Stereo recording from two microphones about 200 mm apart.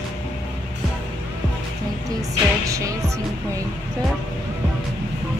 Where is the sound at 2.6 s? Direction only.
15° right (ahead or behind).